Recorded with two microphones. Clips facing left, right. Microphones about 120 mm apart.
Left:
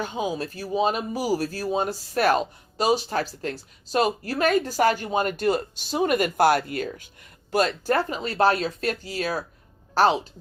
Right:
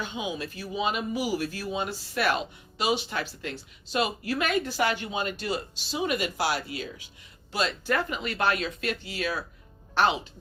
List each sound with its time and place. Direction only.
0.0 s speech: 40° left (ahead or behind)